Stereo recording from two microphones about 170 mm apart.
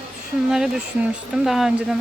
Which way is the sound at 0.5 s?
5° right (ahead or behind).